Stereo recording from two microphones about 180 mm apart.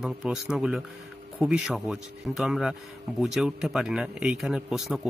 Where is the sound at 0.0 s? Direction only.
5° right (ahead or behind).